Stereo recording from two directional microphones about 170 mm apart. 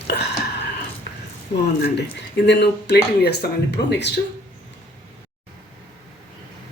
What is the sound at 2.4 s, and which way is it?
Speech, 90° left.